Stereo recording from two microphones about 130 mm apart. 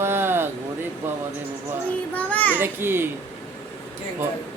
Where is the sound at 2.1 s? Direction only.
10° left (ahead or behind).